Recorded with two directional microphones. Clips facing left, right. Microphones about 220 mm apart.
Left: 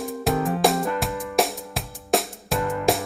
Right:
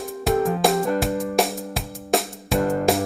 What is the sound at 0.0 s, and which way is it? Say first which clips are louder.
Music: right 3 dB; centre (ahead or behind).